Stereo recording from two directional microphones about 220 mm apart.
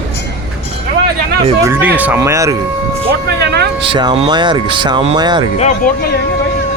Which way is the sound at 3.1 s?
50° right (ahead or behind).